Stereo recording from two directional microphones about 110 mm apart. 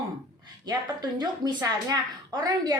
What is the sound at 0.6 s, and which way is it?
A woman's voice, 40° right (ahead or behind).